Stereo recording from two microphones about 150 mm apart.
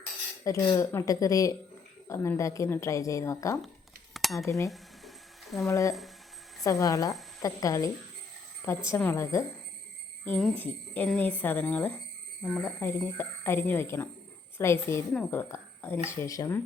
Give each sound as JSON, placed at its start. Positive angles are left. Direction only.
{"t": 0.4, "sound": "a woman's voice", "side_deg": 20}
{"t": 4.1, "sound": "a sound", "side_deg": 0}
{"t": 4.4, "sound": "a woman's voice", "side_deg": 20}
{"t": 4.7, "sound": "a sound", "side_deg": 0}
{"t": 5.6, "sound": "a woman's voice", "side_deg": 20}
{"t": 9.0, "sound": "a woman's voice", "side_deg": 15}
{"t": 10.2, "sound": "speech", "side_deg": 5}